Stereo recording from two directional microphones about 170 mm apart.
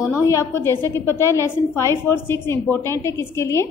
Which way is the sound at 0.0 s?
15° left (ahead or behind).